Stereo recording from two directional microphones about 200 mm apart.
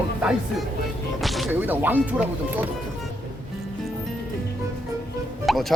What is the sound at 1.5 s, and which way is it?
Speech, 10° right (ahead or behind).